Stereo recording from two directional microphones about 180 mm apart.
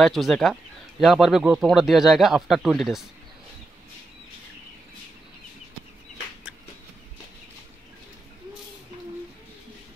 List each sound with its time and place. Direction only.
0.0 s speech: centre (ahead or behind)